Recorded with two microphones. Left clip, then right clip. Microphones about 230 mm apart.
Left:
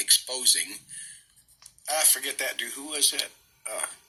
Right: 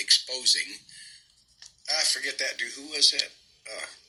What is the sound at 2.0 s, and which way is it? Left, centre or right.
Speech, centre.